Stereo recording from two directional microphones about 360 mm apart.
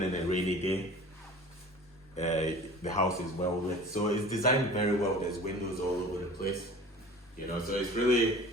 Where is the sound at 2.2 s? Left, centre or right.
Centre.